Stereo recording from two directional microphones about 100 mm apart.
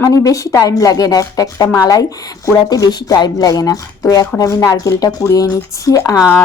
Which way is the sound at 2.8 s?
45° left (ahead or behind).